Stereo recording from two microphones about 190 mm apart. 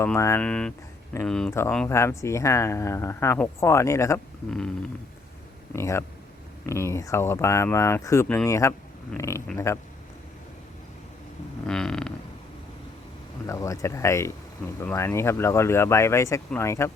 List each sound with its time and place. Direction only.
0.0 s speech: 15° left (ahead or behind)
5.7 s speech: 15° left (ahead or behind)
11.6 s vehicle: 5° left (ahead or behind)
13.5 s speech: 15° left (ahead or behind)